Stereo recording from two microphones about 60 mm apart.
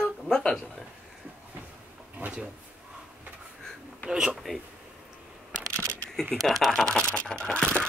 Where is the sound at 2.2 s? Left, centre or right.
Right.